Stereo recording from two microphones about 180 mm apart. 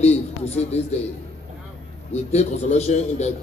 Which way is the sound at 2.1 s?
35° left (ahead or behind).